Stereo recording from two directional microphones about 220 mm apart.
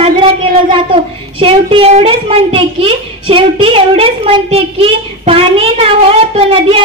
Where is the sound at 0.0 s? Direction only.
25° right (ahead or behind).